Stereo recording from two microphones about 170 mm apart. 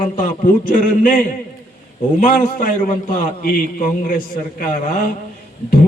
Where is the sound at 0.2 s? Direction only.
50° left (ahead or behind).